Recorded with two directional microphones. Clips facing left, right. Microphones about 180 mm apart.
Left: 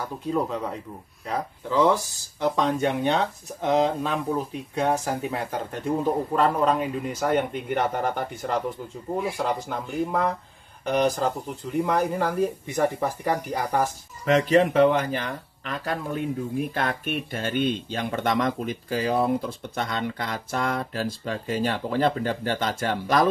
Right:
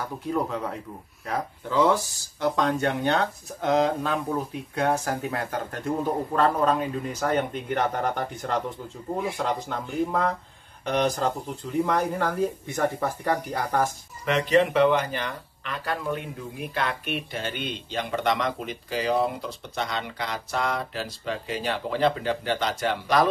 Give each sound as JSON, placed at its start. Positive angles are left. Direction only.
{"t": 0.3, "sound": "speech", "side_deg": 5}
{"t": 14.2, "sound": "speech", "side_deg": 45}